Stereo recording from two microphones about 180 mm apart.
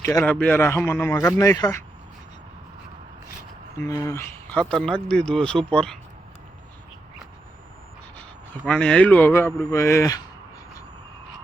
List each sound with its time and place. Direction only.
0.0 s a man's voice: 15° left (ahead or behind)
3.8 s speech: 20° left (ahead or behind)
8.6 s a man's voice: 5° left (ahead or behind)